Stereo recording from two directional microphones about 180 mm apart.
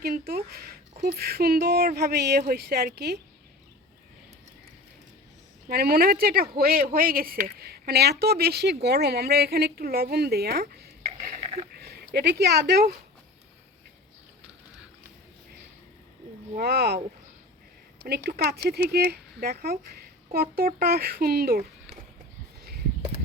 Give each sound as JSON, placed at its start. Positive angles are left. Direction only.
{"t": 0.0, "sound": "speech", "side_deg": -60}
{"t": 5.6, "sound": "speech", "side_deg": -60}
{"t": 11.7, "sound": "speech", "side_deg": -60}
{"t": 16.6, "sound": "speech", "side_deg": -65}
{"t": 18.3, "sound": "speech", "side_deg": -60}